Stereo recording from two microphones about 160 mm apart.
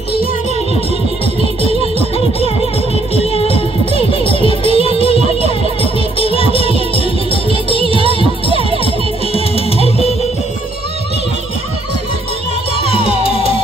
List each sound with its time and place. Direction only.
1.7 s music: 35° left (ahead or behind)
12.7 s music: 35° left (ahead or behind)